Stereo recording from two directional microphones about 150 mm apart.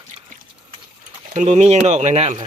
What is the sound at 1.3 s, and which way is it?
Speech, 50° right (ahead or behind).